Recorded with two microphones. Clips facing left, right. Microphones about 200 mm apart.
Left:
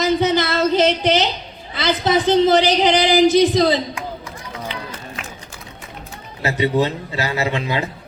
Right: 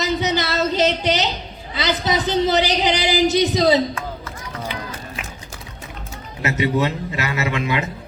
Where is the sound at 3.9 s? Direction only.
15° left (ahead or behind).